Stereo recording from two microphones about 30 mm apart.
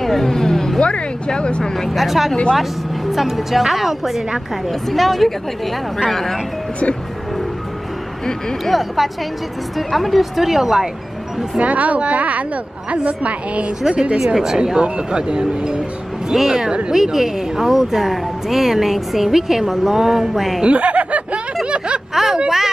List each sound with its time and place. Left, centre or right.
0.0 s speech: centre
0.7 s speech: left
2.0 s a woman's voice: centre
8.6 s a woman's voice: centre
11.6 s a woman's voice: right
14.1 s speech: centre
14.8 s speech: right
16.3 s speech: centre
20.6 s speech: right
21.6 s a sound: right
22.1 s a sound: centre